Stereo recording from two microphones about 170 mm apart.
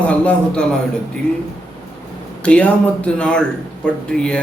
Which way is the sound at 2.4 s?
5° left (ahead or behind).